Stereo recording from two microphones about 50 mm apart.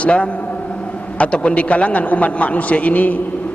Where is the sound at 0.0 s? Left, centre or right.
Left.